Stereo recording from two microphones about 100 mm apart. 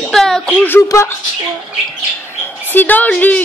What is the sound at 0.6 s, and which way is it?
Speech, 20° left (ahead or behind).